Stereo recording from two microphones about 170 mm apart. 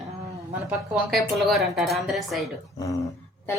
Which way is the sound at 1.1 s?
Centre (ahead or behind).